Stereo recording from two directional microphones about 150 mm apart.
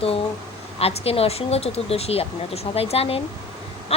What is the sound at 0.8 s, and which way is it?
A woman's voice, 40° left (ahead or behind).